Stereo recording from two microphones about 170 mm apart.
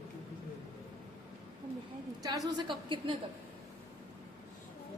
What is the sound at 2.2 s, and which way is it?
Speech, 20° right (ahead or behind).